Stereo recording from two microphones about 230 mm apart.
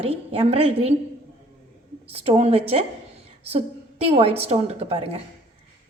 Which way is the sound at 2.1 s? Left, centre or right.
Right.